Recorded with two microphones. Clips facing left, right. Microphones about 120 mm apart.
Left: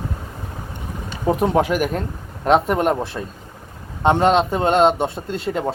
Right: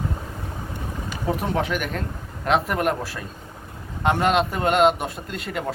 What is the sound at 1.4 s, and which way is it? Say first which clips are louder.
Speech: left 9 dB; 40° left (ahead or behind).